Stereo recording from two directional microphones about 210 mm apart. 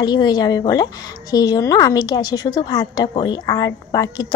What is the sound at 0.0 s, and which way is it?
A woman's voice, 20° left (ahead or behind).